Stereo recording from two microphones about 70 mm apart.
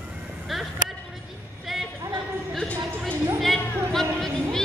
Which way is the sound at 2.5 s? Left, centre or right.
Centre.